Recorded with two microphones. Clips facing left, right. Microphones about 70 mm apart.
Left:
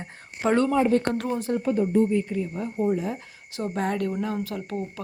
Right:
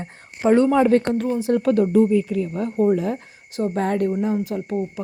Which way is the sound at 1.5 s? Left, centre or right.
Right.